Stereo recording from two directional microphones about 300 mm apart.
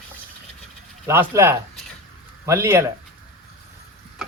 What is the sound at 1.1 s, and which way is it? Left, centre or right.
Speech, centre.